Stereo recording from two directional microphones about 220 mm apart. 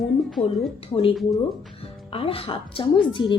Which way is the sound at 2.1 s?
25° left (ahead or behind).